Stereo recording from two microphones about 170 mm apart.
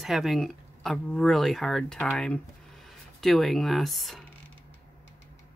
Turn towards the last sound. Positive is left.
turn(degrees=0)  # may be behind; listen again after turning